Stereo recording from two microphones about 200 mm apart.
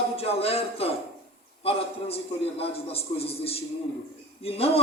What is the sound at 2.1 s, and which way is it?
A man's voice, 30° left (ahead or behind).